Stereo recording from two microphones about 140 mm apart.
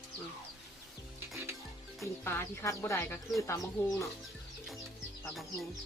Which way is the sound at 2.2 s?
20° left (ahead or behind).